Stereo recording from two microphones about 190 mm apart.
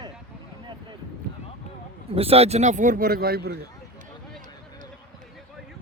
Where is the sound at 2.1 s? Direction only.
30° right (ahead or behind).